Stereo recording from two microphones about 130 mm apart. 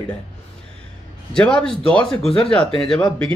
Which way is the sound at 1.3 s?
5° left (ahead or behind).